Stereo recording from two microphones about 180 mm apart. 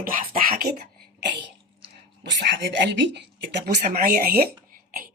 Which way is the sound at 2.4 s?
70° right (ahead or behind).